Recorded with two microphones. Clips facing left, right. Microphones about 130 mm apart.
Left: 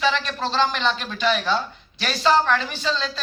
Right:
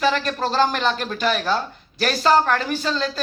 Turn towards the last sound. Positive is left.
turn(degrees=-50)  # may be behind; listen again after turning